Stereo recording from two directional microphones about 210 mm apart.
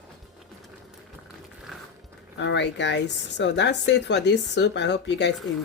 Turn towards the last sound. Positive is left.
turn(degrees=55)  # may be behind; listen again after turning